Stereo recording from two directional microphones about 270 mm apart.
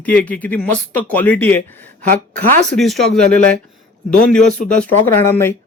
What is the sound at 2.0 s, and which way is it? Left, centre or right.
Speech, right.